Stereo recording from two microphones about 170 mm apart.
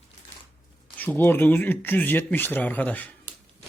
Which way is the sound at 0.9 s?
10° left (ahead or behind).